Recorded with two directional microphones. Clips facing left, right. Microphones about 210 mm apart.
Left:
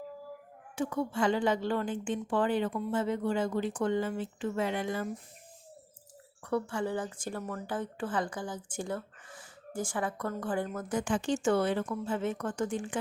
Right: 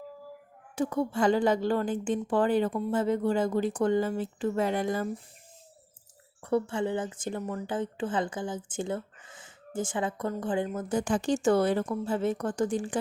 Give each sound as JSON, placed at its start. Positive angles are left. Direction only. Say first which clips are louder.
{"t": 0.8, "sound": "a woman's voice", "louder": "right 3 dB", "side_deg": -40}
{"t": 6.4, "sound": "speech", "louder": "right 4 dB", "side_deg": -25}
{"t": 10.9, "sound": "a woman's voice", "louder": "right 3 dB", "side_deg": -40}